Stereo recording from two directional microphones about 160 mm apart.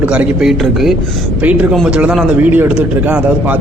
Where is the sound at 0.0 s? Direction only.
10° right (ahead or behind).